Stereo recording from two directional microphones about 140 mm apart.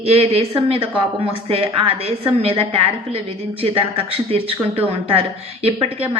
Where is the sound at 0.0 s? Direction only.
45° right (ahead or behind).